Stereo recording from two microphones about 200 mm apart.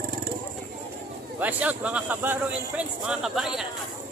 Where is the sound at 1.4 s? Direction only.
5° right (ahead or behind).